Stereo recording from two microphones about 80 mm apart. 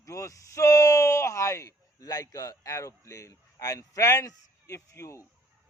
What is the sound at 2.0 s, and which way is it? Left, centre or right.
A man's voice, left.